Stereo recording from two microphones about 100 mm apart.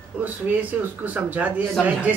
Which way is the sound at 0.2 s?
15° right (ahead or behind).